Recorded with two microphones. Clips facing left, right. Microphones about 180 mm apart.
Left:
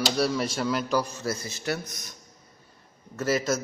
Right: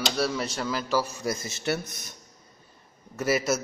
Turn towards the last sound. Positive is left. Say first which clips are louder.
# even
turn(degrees=-10)  # may be behind; listen again after turning